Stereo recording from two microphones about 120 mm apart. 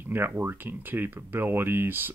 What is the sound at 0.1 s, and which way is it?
Speech, 20° right (ahead or behind).